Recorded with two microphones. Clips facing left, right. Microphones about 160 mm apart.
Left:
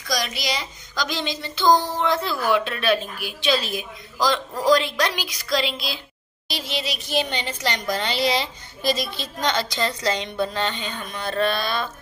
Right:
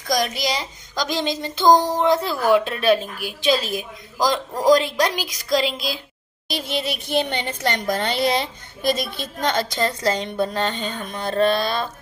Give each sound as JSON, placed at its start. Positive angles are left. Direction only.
{"t": 0.1, "sound": "a child's voice", "side_deg": -45}